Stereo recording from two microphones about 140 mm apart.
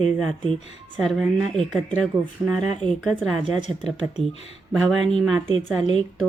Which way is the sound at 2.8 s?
10° left (ahead or behind).